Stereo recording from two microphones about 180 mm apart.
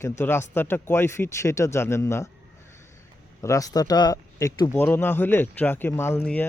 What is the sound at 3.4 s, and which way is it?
Speech, 20° left (ahead or behind).